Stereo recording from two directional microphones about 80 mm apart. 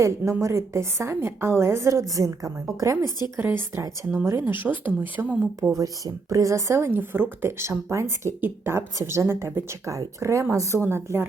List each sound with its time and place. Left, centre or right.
0.0 s a woman's voice: right
3.3 s speech: right
5.7 s a woman's voice: right
8.4 s a woman's voice: right